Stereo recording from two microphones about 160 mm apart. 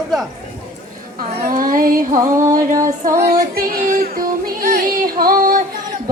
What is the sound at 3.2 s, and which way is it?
Music, 70° right (ahead or behind).